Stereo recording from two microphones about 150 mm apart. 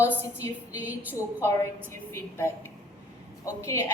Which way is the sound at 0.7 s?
10° right (ahead or behind).